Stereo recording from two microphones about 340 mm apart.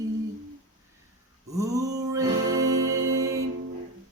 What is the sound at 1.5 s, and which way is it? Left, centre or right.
Music, centre.